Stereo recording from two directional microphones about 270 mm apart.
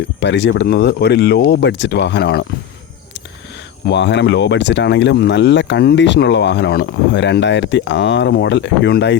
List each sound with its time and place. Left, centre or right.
0.2 s speech: left
3.8 s speech: left